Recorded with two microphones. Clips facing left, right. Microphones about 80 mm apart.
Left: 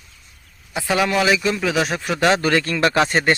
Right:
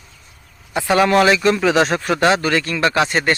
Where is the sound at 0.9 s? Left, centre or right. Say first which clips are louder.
Right 5 dB; right.